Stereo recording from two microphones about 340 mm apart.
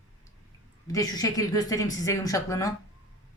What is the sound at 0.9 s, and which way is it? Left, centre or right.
Speech, centre.